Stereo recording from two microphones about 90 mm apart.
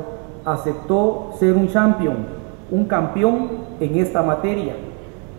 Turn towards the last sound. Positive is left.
turn(degrees=0)  # may be behind; listen again after turning